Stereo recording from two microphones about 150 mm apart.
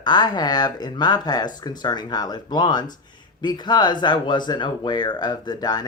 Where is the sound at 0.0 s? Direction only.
30° left (ahead or behind).